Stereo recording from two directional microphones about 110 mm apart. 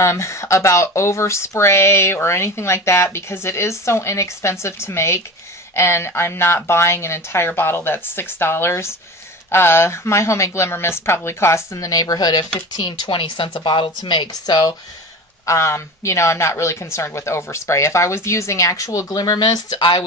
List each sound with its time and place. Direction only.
0.0 s speech: 25° left (ahead or behind)
15.4 s speech: 25° left (ahead or behind); by 20.0 s 45° left (ahead or behind)